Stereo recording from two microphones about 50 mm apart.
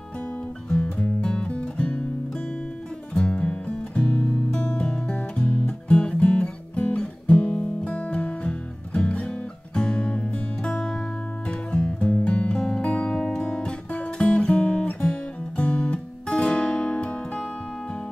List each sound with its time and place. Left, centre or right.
0.7 s music: left
3.2 s music: left
4.5 s music: centre
12.0 s music: left
12.3 s music: left